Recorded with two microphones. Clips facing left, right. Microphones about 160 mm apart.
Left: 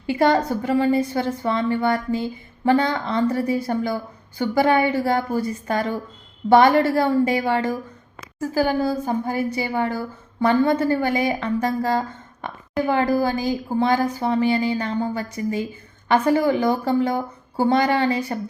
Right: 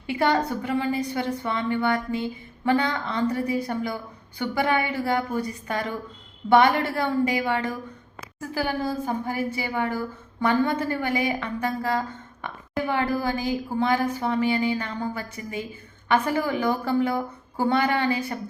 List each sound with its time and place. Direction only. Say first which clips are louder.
0.1 s speech: left 4 dB; 40° left (ahead or behind)